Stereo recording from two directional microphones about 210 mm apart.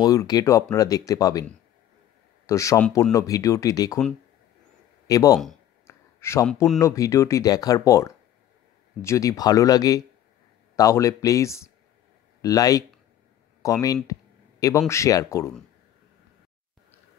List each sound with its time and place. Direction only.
0.0 s speech: 15° left (ahead or behind)
2.4 s speech: 15° left (ahead or behind)
5.0 s speech: 15° left (ahead or behind)
5.9 s a sound: 15° left (ahead or behind)
6.8 s speech: 15° left (ahead or behind)